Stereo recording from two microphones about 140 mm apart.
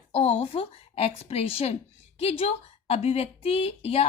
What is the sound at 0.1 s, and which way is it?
A woman's voice, 50° left (ahead or behind).